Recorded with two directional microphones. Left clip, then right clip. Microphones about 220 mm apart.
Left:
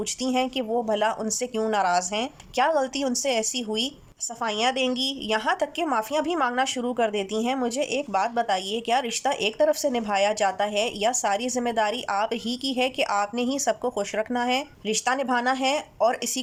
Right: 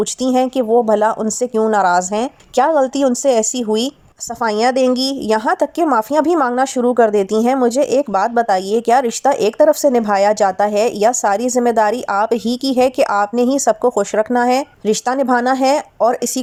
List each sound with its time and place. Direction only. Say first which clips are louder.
0.0 s a woman's voice: right 10 dB; 20° right (ahead or behind)